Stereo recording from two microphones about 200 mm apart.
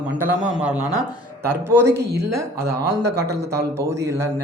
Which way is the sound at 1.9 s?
55° right (ahead or behind).